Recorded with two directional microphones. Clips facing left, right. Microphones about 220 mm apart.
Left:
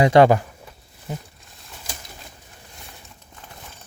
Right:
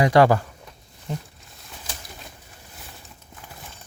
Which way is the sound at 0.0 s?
25° left (ahead or behind).